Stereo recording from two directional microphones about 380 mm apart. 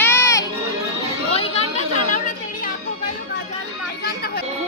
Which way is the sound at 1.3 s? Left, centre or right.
Centre.